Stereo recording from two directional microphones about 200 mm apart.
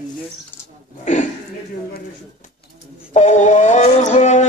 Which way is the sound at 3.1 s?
35° left (ahead or behind).